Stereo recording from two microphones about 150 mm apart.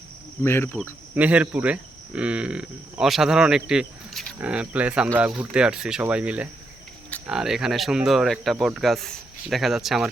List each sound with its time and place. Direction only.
0.4 s speech: 15° left (ahead or behind)
1.1 s speech: 10° right (ahead or behind)